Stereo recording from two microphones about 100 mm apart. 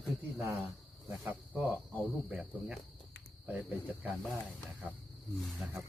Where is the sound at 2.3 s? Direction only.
10° right (ahead or behind).